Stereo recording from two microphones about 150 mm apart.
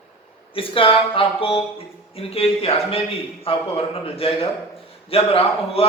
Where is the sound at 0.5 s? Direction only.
35° left (ahead or behind).